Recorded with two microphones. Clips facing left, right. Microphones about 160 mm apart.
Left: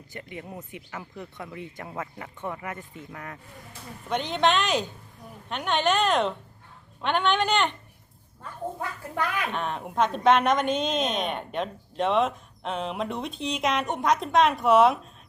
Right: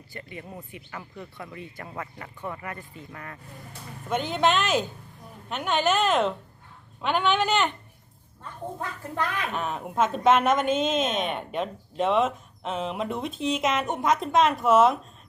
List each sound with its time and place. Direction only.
0.1 s speech: 15° left (ahead or behind)
4.1 s a woman's voice: 5° right (ahead or behind)
9.5 s a woman's voice: 5° right (ahead or behind)